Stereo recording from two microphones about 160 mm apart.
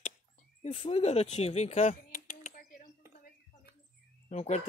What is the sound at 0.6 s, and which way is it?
Speech, 40° left (ahead or behind).